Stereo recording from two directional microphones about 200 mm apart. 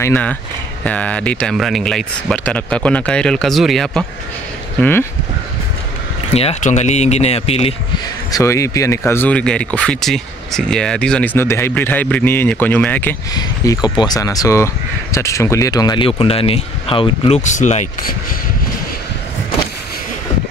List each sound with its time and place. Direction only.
0.0 s speech: 10° left (ahead or behind)
6.3 s speech: 35° left (ahead or behind)
8.3 s speech: 15° left (ahead or behind)
13.3 s speech: 20° left (ahead or behind)
17.4 s speech: 35° left (ahead or behind)